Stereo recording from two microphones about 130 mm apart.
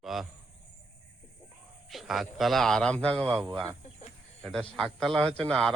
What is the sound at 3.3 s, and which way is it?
Speech, 15° right (ahead or behind).